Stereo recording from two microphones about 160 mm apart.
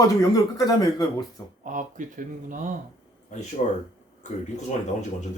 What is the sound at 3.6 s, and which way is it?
Speech, 45° left (ahead or behind).